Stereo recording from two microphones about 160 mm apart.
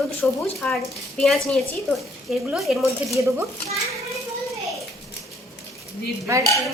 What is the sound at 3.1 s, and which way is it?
Speech, 20° right (ahead or behind).